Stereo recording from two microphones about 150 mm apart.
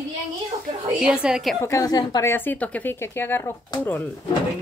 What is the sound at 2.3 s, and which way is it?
A woman's voice, 10° left (ahead or behind).